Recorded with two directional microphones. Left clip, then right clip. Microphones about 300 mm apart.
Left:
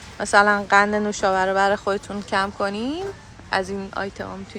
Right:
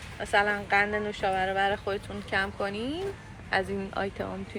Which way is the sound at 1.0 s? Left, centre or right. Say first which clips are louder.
Left 8 dB; centre.